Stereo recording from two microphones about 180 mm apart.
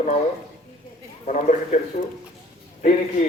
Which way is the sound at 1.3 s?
40° left (ahead or behind).